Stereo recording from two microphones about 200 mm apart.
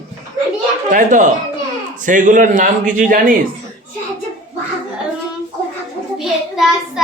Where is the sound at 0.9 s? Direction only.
40° right (ahead or behind).